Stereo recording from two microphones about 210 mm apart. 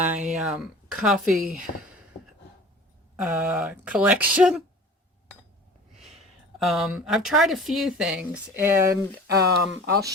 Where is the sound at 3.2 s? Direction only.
5° right (ahead or behind).